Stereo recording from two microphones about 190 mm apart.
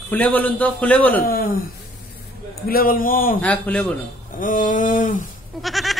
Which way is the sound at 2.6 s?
50° left (ahead or behind).